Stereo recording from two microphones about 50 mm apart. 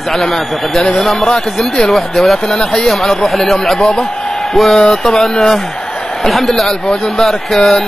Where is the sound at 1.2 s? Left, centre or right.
Centre.